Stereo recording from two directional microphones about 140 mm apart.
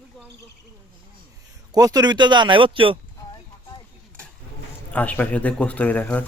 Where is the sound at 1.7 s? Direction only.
25° right (ahead or behind).